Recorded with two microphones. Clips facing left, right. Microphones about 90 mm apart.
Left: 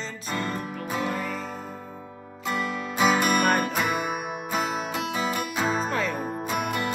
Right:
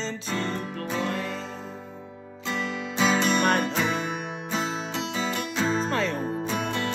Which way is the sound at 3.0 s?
10° left (ahead or behind).